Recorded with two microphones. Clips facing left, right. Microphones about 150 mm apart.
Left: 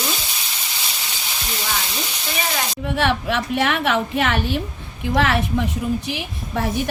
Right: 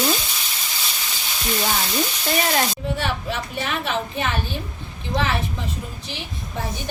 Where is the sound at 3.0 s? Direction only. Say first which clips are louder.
Left 6 dB; 90° left.